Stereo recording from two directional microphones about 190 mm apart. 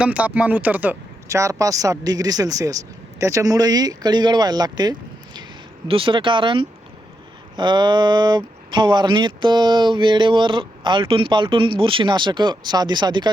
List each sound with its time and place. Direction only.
0.0 s speech: 5° right (ahead or behind); by 13.3 s 25° right (ahead or behind)